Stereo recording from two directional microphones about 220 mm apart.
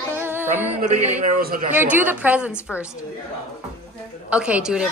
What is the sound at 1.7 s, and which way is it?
Music, 10° right (ahead or behind).